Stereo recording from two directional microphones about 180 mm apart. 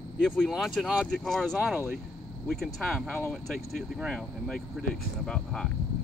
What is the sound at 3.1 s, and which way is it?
Speech, 10° left (ahead or behind).